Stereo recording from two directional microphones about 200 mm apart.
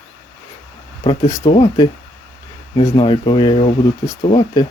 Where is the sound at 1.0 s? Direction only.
20° left (ahead or behind).